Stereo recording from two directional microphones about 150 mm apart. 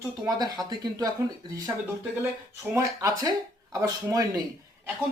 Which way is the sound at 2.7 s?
20° right (ahead or behind).